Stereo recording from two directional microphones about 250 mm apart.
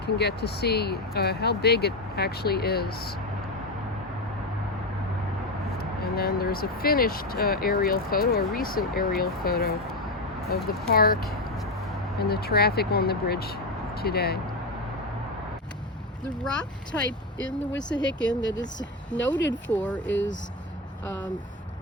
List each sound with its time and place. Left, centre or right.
0.0 s speech: left
5.7 s speech: left
16.2 s speech: centre
17.4 s speech: left
18.3 s speech: centre
19.3 s speech: left
19.7 s speech: centre
20.1 s speech: left